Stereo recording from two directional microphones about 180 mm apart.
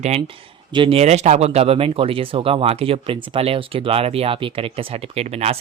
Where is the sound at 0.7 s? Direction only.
30° right (ahead or behind).